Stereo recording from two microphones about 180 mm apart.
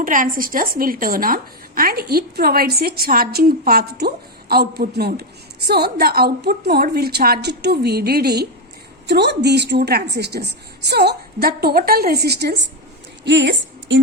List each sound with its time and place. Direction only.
0.0 s a woman's voice: 50° right (ahead or behind); by 12.6 s 65° right (ahead or behind)
13.2 s a woman's voice: 75° right (ahead or behind)